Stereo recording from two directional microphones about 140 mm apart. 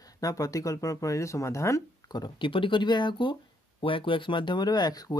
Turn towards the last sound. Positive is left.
turn(degrees=30)  # may be behind; listen again after turning